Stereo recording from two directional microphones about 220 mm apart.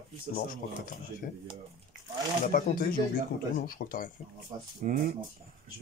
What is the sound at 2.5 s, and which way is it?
Speech, 40° left (ahead or behind).